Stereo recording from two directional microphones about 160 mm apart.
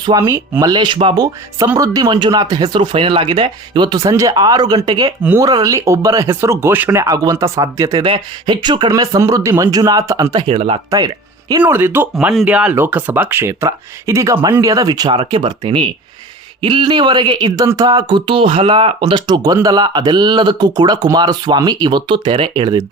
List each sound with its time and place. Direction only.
0.2 s speech: 15° right (ahead or behind)
0.6 s speech: 30° right (ahead or behind)
5.2 s speech: 15° right (ahead or behind)
8.0 s speech: 30° right (ahead or behind)
10.4 s speech: 35° right (ahead or behind)
10.9 s speech: 25° right (ahead or behind)
11.7 s speech: 15° right (ahead or behind)
12.1 s speech: centre (ahead or behind); by 22.8 s 30° right (ahead or behind)